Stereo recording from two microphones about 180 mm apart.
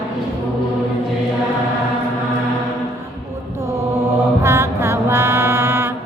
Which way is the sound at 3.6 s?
15° right (ahead or behind).